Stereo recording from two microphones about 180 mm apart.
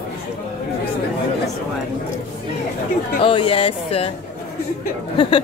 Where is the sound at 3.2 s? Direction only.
30° left (ahead or behind).